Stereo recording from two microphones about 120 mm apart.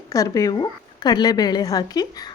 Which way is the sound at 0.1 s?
30° left (ahead or behind).